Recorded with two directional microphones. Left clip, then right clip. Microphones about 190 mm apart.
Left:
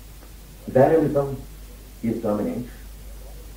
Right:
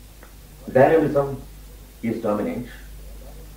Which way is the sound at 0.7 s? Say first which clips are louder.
Right 1 dB; 30° left (ahead or behind).